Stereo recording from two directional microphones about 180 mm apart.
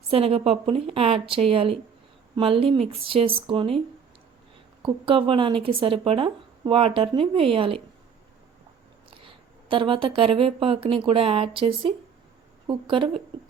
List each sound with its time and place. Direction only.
0.1 s a woman's voice: 30° right (ahead or behind)
4.8 s speech: 30° right (ahead or behind)
9.0 s speech: 30° right (ahead or behind)